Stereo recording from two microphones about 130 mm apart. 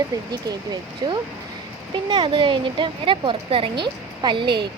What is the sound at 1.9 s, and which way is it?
A woman's voice, 40° right (ahead or behind).